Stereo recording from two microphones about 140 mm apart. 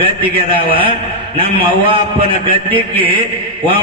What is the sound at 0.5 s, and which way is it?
A man's voice, 40° right (ahead or behind).